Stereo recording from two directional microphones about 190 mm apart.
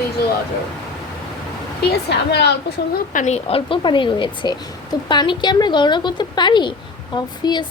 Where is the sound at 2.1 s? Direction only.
60° left (ahead or behind).